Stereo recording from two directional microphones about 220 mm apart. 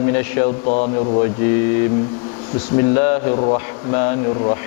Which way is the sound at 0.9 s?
30° left (ahead or behind).